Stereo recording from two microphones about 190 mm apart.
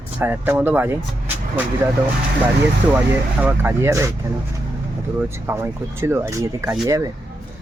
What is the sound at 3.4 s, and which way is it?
Speech, 10° right (ahead or behind).